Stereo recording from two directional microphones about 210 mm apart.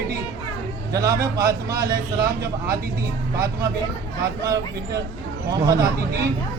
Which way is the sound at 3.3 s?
15° right (ahead or behind).